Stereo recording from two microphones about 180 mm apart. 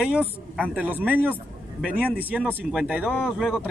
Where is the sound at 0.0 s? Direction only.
5° right (ahead or behind).